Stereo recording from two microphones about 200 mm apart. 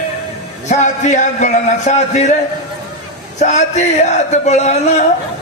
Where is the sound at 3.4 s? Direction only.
35° left (ahead or behind).